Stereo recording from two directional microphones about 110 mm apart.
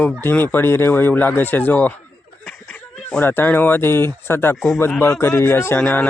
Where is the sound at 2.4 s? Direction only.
5° left (ahead or behind).